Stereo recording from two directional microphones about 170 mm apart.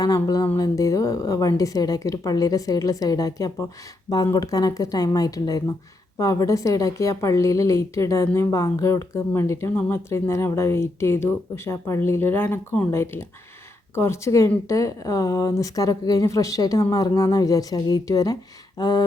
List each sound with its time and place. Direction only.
0.0 s a woman's voice: 20° left (ahead or behind)